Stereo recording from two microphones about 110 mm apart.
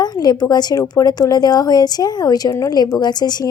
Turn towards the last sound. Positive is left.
turn(degrees=40)  # may be behind; listen again after turning